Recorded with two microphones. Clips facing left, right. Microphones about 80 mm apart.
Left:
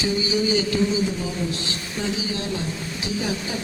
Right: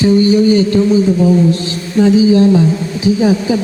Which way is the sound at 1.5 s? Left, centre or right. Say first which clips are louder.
Right 15 dB; right.